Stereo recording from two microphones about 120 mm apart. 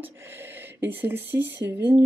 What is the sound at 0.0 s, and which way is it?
A woman's voice, 20° right (ahead or behind).